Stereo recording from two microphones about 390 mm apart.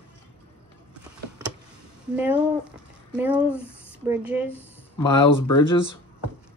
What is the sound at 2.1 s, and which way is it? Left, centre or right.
Speech, centre.